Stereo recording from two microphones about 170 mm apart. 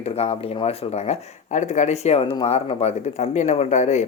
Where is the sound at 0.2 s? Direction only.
40° left (ahead or behind).